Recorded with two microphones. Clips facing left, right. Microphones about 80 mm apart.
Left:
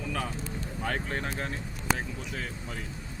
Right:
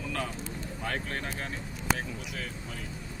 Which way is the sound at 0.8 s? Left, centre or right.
Left.